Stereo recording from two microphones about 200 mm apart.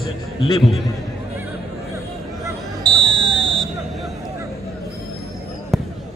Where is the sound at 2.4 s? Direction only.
25° right (ahead or behind).